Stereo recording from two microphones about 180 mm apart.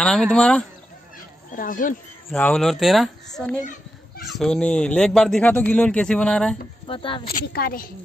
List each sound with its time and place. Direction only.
0.0 s speech: 5° left (ahead or behind)
1.5 s speech: 50° left (ahead or behind)
2.3 s speech: 5° left (ahead or behind)
6.9 s speech: 30° left (ahead or behind)
7.2 s a woman's voice: 55° left (ahead or behind)